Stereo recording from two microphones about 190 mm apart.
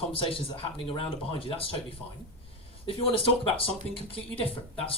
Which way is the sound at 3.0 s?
30° left (ahead or behind).